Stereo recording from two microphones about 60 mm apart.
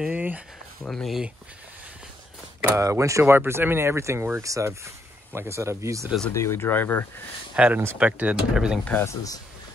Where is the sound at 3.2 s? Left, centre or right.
Right.